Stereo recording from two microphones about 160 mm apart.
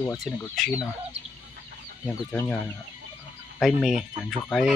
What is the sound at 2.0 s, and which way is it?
Speech, 10° left (ahead or behind).